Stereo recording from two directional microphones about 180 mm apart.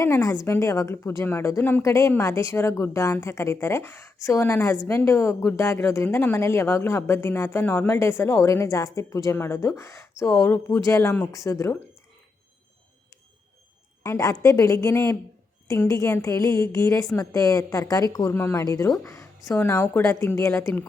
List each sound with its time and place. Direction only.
0.0 s a woman's voice: 15° left (ahead or behind)
14.0 s a woman's voice: 20° left (ahead or behind)